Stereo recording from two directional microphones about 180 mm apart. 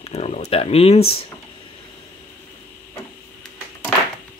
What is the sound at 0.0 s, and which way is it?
Speech, 35° left (ahead or behind).